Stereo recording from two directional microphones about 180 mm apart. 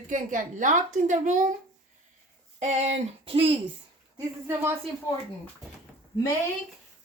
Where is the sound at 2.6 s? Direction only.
40° right (ahead or behind).